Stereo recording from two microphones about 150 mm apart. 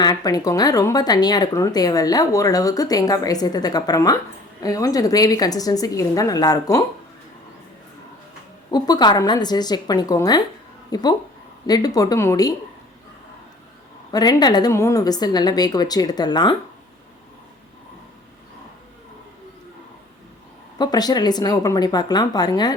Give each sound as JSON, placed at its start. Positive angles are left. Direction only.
{"t": 0.0, "sound": "speech", "side_deg": 25}
{"t": 8.7, "sound": "speech", "side_deg": 30}
{"t": 14.1, "sound": "speech", "side_deg": 25}
{"t": 20.7, "sound": "speech", "side_deg": 25}